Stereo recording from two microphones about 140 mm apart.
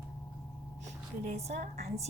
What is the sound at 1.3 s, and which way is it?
Speech, 50° right (ahead or behind).